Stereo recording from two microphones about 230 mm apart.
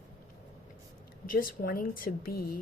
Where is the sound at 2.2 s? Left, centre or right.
Left.